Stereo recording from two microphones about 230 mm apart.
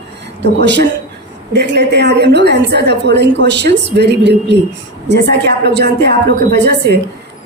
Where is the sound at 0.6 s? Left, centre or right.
Right.